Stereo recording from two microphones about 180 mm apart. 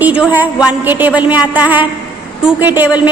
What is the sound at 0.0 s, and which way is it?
A woman's voice, 10° right (ahead or behind).